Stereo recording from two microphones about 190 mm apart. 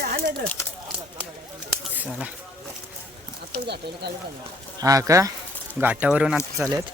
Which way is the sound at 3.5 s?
60° right (ahead or behind).